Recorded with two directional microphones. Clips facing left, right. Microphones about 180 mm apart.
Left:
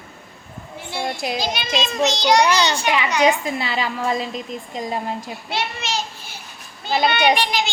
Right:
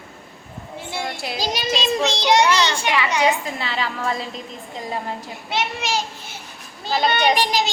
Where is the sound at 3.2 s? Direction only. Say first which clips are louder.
Left 3 dB; 15° left (ahead or behind).